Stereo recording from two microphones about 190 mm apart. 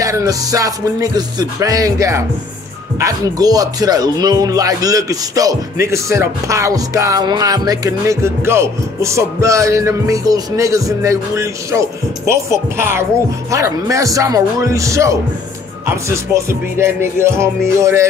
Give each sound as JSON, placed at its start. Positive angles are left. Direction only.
{"t": 0.0, "sound": "speech", "side_deg": -15}